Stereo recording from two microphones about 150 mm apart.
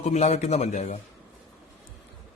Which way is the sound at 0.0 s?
50° left (ahead or behind).